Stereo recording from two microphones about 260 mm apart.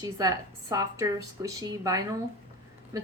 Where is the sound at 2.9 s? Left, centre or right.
Centre.